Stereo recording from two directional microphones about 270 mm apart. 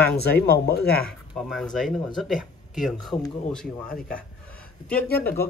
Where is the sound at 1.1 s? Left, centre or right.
Centre.